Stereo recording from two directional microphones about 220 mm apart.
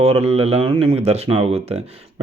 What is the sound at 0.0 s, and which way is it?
Speech, 25° right (ahead or behind).